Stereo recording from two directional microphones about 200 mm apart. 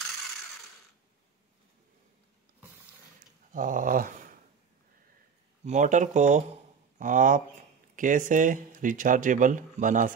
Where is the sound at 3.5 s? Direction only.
40° right (ahead or behind).